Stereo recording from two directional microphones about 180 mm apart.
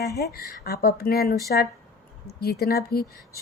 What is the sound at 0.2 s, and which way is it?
A woman's voice, 60° left (ahead or behind).